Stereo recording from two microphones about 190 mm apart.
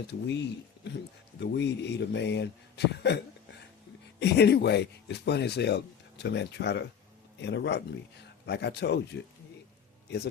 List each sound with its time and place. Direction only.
0.1 s speech: 65° left (ahead or behind)